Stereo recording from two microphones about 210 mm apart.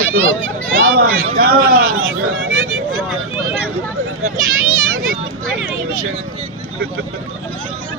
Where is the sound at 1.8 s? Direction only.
75° right (ahead or behind).